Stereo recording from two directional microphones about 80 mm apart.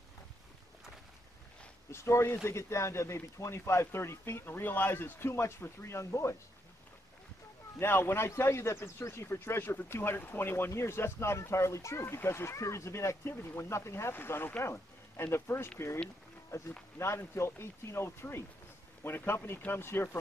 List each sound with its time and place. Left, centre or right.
1.9 s a man's voice: left
7.8 s a man's voice: left